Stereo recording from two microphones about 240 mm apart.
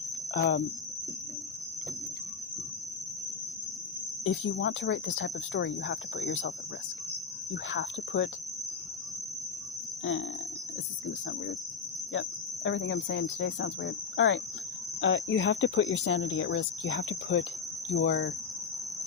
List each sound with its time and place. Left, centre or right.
0.3 s speech: left
4.2 s speech: left
7.5 s speech: left
10.0 s cricket: left
12.6 s speech: left